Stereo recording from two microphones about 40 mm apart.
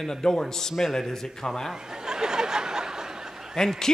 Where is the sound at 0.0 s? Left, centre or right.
Centre.